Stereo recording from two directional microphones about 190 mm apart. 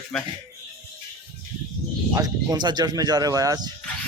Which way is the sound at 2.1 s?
20° right (ahead or behind).